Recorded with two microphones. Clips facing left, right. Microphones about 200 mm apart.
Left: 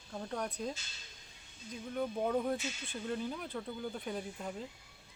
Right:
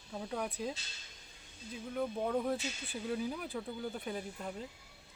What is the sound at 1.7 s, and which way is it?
Speech, centre (ahead or behind).